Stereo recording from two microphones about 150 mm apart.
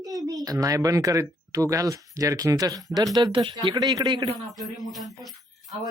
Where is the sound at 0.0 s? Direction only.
25° right (ahead or behind).